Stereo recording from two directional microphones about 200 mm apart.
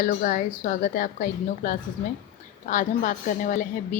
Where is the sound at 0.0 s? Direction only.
40° left (ahead or behind).